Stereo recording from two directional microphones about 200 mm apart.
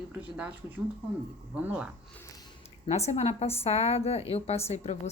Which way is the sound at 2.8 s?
35° left (ahead or behind).